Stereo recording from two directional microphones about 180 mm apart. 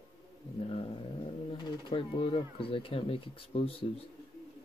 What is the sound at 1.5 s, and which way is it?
Speech, 25° left (ahead or behind).